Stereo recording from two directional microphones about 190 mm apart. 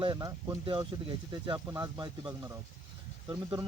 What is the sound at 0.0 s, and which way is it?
Speech, 20° right (ahead or behind).